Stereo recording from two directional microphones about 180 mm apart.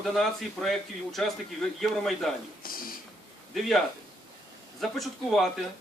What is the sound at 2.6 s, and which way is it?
Speech, 55° left (ahead or behind).